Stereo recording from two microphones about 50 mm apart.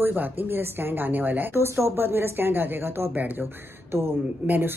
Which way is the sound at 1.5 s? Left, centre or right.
Right.